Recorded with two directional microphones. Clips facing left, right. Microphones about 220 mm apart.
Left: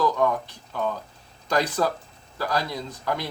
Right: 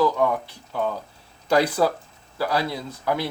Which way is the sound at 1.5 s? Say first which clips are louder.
Right 4 dB; 10° right (ahead or behind).